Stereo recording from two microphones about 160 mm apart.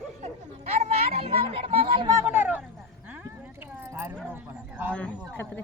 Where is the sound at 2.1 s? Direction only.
10° right (ahead or behind).